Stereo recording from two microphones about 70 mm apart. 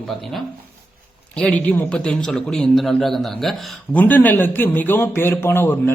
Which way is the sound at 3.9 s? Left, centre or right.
Left.